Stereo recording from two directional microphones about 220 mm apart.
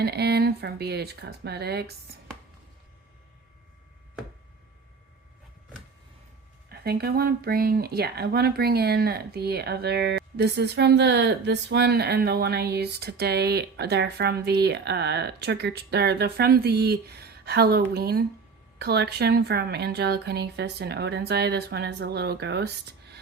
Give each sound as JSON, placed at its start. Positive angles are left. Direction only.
{"t": 0.0, "sound": "speech", "side_deg": -45}
{"t": 6.7, "sound": "speech", "side_deg": -45}